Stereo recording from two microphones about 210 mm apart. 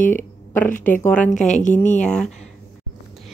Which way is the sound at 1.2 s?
35° left (ahead or behind).